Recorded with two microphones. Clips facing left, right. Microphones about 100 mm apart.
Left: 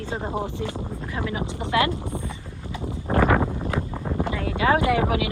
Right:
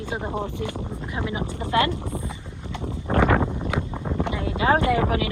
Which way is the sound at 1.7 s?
25° right (ahead or behind).